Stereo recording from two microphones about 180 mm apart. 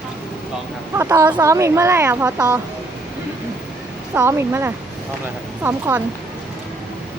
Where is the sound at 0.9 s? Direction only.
15° right (ahead or behind).